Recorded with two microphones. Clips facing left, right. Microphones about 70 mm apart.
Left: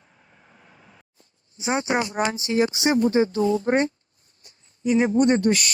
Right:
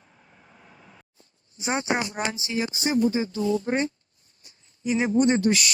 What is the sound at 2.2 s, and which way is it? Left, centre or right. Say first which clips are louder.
Speech: left 6 dB; left.